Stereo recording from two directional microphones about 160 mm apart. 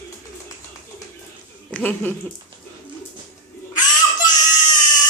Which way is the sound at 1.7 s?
10° left (ahead or behind).